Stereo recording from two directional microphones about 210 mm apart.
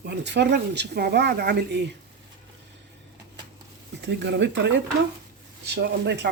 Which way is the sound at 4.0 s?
55° right (ahead or behind).